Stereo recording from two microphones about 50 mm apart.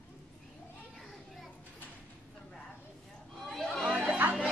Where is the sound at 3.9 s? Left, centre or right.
Right.